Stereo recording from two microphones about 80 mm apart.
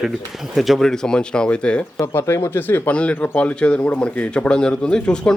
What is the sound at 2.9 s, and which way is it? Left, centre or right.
Speech, centre.